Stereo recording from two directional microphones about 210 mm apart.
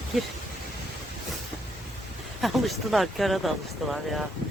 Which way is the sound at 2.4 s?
Centre (ahead or behind).